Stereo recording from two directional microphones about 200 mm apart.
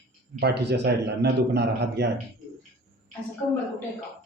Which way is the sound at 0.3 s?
55° right (ahead or behind).